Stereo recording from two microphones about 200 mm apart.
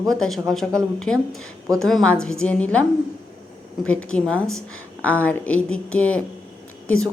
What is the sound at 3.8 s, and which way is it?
A woman's voice, 5° left (ahead or behind).